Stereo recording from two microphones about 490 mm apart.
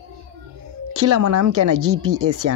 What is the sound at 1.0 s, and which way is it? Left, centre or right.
Speech, right.